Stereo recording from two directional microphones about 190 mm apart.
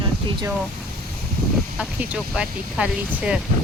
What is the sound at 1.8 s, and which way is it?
Speech, 5° right (ahead or behind).